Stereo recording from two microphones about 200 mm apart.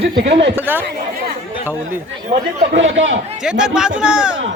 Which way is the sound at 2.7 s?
70° right (ahead or behind).